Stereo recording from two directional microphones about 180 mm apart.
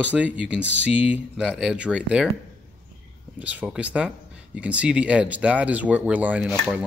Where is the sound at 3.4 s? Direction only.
10° right (ahead or behind).